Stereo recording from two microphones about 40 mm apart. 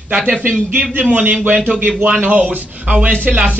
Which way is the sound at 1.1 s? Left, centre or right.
Right.